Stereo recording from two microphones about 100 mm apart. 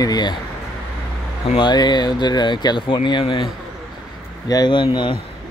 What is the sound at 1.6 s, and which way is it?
Speech, 45° left (ahead or behind).